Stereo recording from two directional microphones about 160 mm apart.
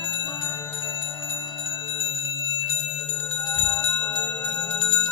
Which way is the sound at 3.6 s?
10° left (ahead or behind).